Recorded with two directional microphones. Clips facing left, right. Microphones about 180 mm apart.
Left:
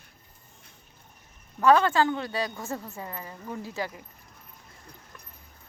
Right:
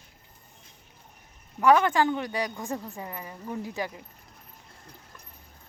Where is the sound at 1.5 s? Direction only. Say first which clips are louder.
Even; 15° right (ahead or behind).